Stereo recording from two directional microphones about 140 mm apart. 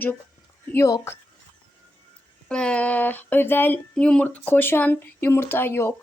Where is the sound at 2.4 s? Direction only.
5° left (ahead or behind).